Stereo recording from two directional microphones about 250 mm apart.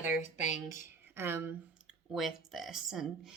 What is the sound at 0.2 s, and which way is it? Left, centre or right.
Speech, left.